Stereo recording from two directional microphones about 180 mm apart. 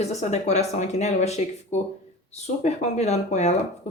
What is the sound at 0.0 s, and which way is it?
Speech, 40° left (ahead or behind).